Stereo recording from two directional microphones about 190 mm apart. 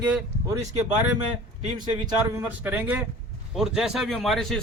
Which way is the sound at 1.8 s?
25° right (ahead or behind).